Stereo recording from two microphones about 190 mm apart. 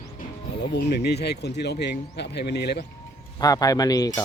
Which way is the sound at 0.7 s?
60° left (ahead or behind).